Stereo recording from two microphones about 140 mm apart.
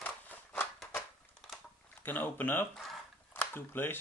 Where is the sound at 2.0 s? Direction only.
15° left (ahead or behind).